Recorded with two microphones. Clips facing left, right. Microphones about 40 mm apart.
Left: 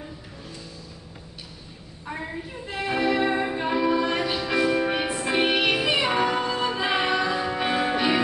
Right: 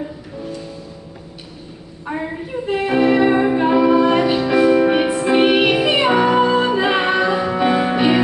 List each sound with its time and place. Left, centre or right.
2.0 s a sound: right
2.6 s music: right
4.5 s music: centre
7.5 s music: centre
7.9 s music: right